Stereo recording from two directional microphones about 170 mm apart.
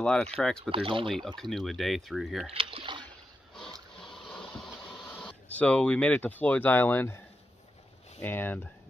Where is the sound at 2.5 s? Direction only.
35° right (ahead or behind).